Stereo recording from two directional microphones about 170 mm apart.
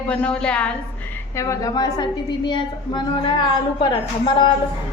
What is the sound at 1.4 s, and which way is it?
A woman's voice, 20° left (ahead or behind).